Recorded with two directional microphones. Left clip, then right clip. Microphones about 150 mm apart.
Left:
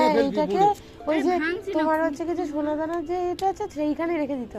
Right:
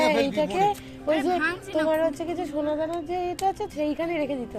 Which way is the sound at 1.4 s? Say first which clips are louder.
Even; 60° right (ahead or behind).